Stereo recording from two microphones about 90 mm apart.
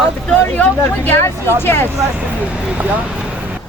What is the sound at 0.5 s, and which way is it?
Speech, 20° left (ahead or behind).